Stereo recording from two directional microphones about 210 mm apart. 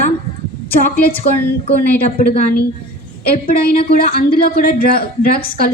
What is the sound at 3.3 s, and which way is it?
Speech, 45° left (ahead or behind).